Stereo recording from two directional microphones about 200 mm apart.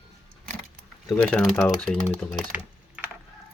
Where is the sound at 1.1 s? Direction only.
10° left (ahead or behind).